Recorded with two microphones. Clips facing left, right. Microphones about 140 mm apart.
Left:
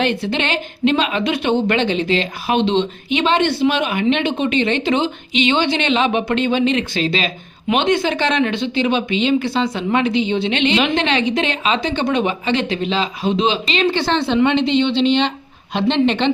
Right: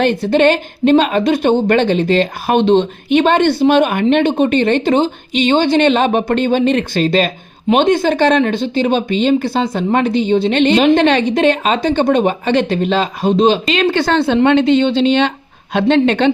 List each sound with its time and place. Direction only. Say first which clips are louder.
0.0 s speech: right 8 dB; 45° right (ahead or behind)